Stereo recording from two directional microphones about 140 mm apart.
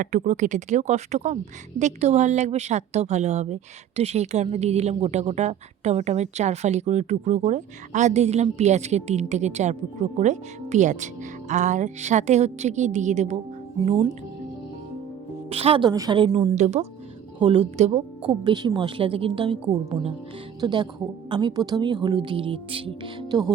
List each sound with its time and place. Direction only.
0.0 s speech: 60° right (ahead or behind)
13.8 s a woman's voice: 35° right (ahead or behind)
15.4 s a woman's voice: 45° right (ahead or behind)
15.9 s a woman's voice: 30° right (ahead or behind)
16.6 s speech: 50° right (ahead or behind)
17.4 s a woman's voice: 35° right (ahead or behind)
17.7 s speech: 55° right (ahead or behind)
18.3 s a woman's voice: 35° right (ahead or behind)
20.6 s a woman's voice: 30° right (ahead or behind)